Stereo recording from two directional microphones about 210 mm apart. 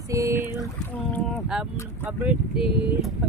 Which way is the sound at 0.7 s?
Centre (ahead or behind).